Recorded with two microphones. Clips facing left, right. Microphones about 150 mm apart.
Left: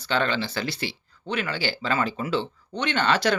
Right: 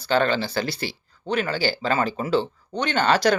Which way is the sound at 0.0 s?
40° right (ahead or behind).